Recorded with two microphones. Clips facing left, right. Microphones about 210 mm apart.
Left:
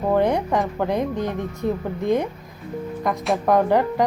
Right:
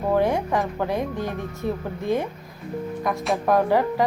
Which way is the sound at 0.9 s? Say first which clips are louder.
Left 3 dB; 20° left (ahead or behind).